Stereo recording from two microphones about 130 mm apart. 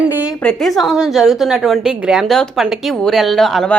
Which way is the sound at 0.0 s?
10° right (ahead or behind).